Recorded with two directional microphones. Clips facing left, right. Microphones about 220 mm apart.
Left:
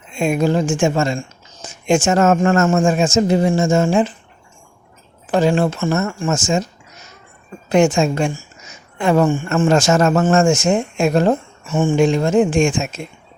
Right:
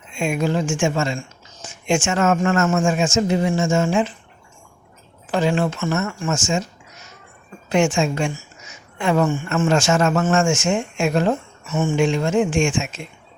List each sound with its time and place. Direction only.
0.1 s speech: 35° left (ahead or behind)
5.3 s speech: 40° left (ahead or behind)
7.7 s speech: 40° left (ahead or behind)